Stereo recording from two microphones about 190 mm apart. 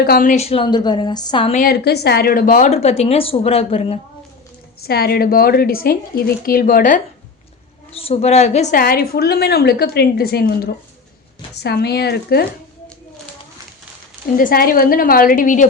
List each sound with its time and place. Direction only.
0.0 s a woman's voice: 50° left (ahead or behind); by 1.5 s 25° left (ahead or behind)
1.5 s speech: 55° left (ahead or behind); by 4.0 s 30° left (ahead or behind)
4.8 s a woman's voice: 55° left (ahead or behind)
7.9 s a woman's voice: 30° left (ahead or behind); by 12.5 s 55° left (ahead or behind)
14.3 s a woman's voice: 50° left (ahead or behind)